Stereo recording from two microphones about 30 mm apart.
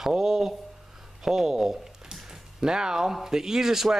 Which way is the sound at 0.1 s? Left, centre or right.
Centre.